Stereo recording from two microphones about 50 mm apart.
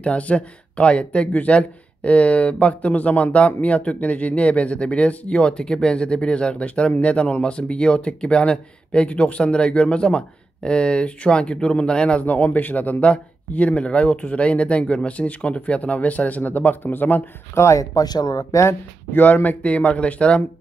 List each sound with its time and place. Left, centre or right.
0.0 s speech: left
12.3 s speech: left
17.6 s speech: left
19.1 s speech: left